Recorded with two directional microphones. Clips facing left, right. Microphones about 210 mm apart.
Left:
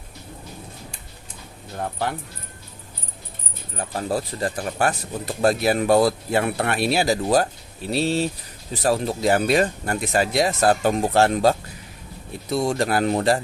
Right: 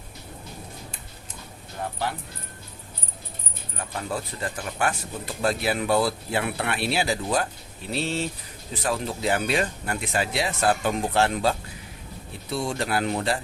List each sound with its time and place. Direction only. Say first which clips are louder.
3.8 s speech: left 6 dB; 35° left (ahead or behind)